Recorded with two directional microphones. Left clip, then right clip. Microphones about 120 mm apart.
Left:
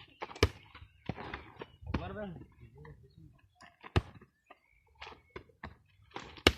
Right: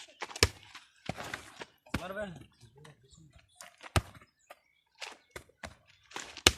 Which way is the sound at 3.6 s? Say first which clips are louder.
Right 3 dB; 50° right (ahead or behind).